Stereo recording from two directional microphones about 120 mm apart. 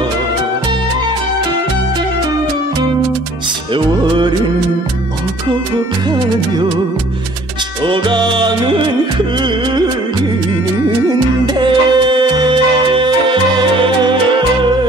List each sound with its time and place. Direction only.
3.7 s music: 40° right (ahead or behind)
7.8 s music: 40° right (ahead or behind)
11.1 s music: 35° right (ahead or behind)